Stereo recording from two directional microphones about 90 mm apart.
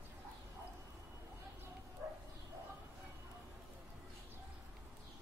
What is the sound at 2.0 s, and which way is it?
Bow-wow, 20° right (ahead or behind).